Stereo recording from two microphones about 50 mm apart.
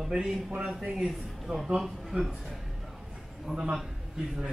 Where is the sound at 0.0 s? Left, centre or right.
Centre.